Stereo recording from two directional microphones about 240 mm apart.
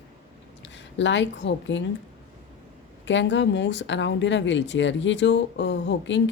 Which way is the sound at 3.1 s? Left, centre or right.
Left.